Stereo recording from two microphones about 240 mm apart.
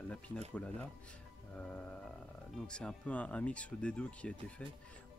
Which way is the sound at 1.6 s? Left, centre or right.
Centre.